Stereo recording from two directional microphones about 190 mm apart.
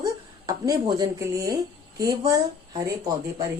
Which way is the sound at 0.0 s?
20° right (ahead or behind).